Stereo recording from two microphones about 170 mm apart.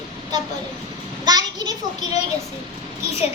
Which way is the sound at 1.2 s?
25° right (ahead or behind).